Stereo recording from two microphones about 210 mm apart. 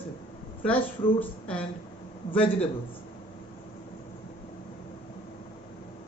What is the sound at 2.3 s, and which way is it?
Speech, 25° left (ahead or behind).